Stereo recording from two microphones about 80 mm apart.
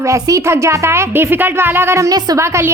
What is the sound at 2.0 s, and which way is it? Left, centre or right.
Speech, right.